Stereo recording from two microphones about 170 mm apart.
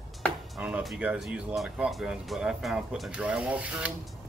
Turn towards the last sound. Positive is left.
turn(degrees=-10)  # may be behind; listen again after turning